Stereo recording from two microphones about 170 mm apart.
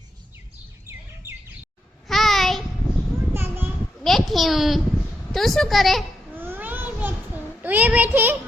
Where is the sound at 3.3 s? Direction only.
15° right (ahead or behind).